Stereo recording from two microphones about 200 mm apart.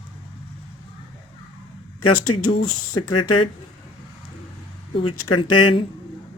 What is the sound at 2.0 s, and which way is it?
Speech, 90° left.